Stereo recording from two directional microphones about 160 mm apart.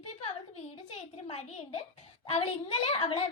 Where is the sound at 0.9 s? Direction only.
40° left (ahead or behind).